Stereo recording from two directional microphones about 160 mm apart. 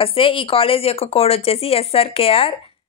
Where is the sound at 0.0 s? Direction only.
35° left (ahead or behind).